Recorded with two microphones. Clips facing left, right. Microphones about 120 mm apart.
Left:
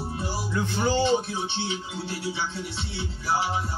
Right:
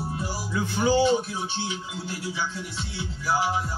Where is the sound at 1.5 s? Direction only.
30° left (ahead or behind).